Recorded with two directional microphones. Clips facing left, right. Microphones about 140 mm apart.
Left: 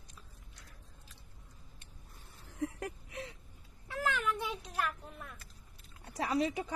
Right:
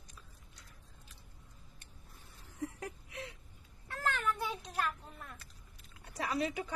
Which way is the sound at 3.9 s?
5° left (ahead or behind).